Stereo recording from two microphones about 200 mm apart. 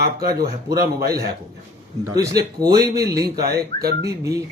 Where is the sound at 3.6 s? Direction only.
50° right (ahead or behind).